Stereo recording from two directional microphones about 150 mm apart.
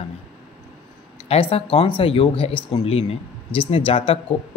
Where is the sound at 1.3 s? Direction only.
40° left (ahead or behind).